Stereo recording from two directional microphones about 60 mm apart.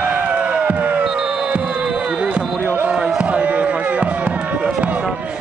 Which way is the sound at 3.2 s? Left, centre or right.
Right.